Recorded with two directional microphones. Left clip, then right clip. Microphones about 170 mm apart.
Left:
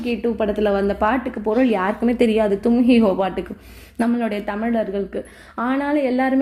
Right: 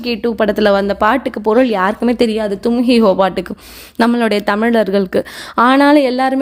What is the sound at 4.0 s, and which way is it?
A woman's voice, 60° right (ahead or behind).